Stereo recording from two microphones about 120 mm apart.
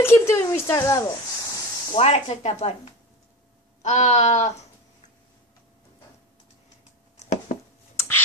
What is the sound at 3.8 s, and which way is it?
Speech, 75° left (ahead or behind).